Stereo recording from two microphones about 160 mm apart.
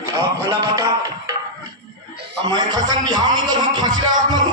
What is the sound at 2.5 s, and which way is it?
A man's voice, 25° right (ahead or behind).